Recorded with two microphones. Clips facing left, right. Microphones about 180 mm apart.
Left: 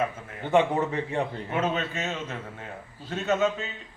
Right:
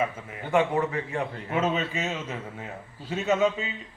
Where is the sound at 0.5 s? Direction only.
25° left (ahead or behind).